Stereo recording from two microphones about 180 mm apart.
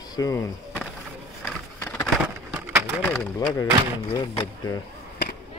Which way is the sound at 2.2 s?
10° right (ahead or behind).